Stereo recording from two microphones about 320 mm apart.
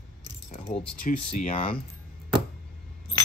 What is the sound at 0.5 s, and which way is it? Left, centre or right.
Speech, left.